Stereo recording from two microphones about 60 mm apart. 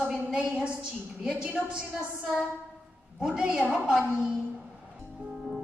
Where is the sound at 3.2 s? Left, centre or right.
Centre.